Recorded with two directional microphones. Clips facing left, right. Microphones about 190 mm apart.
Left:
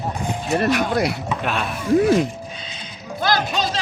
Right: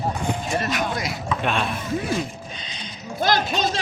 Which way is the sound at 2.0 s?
60° left (ahead or behind).